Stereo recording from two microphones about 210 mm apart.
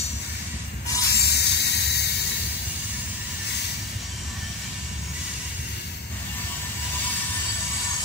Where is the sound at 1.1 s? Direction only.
50° left (ahead or behind).